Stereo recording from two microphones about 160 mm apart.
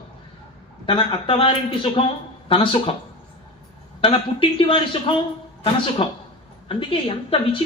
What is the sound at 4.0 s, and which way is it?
A woman's voice, 30° left (ahead or behind).